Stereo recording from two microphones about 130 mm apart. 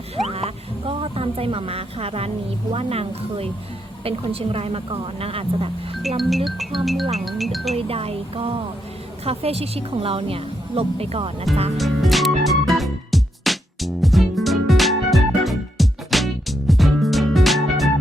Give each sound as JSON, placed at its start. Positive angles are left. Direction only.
{"t": 0.3, "sound": "music", "side_deg": -50}
{"t": 2.7, "sound": "a woman's voice", "side_deg": -50}
{"t": 6.1, "sound": "speech", "side_deg": 0}
{"t": 7.8, "sound": "a woman's voice", "side_deg": -50}
{"t": 11.5, "sound": "speech", "side_deg": 0}
{"t": 11.8, "sound": "music", "side_deg": 0}